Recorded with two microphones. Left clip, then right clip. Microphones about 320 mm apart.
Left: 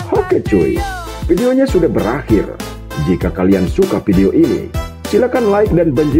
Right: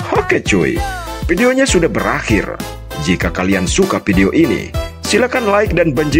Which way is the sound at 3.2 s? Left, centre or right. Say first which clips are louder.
Left 4 dB; right.